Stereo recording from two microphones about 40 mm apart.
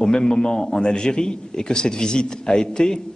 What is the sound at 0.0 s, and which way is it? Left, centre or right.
Speech, centre.